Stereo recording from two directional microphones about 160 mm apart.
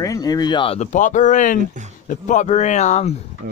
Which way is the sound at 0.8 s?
50° left (ahead or behind).